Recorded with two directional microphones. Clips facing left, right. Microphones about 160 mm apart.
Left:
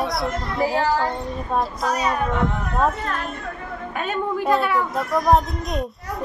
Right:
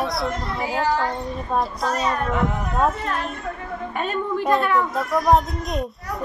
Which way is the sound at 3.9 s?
Centre (ahead or behind).